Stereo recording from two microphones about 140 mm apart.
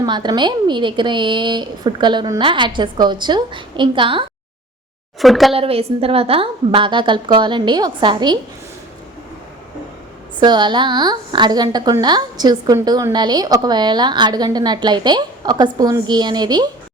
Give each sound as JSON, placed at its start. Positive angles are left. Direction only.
{"t": 0.0, "sound": "a woman's voice", "side_deg": -30}
{"t": 5.2, "sound": "a woman's voice", "side_deg": 0}
{"t": 5.5, "sound": "a woman's voice", "side_deg": -45}
{"t": 10.4, "sound": "a woman's voice", "side_deg": -30}